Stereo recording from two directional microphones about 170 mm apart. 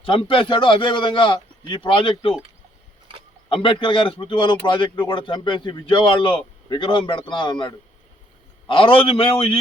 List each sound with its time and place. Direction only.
0.0 s a man's voice: 30° left (ahead or behind)
3.5 s a man's voice: 30° left (ahead or behind)